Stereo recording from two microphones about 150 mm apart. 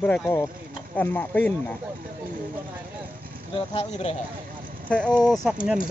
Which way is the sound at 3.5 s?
40° left (ahead or behind).